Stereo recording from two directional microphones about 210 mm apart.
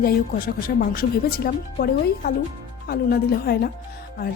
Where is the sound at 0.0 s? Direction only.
45° left (ahead or behind).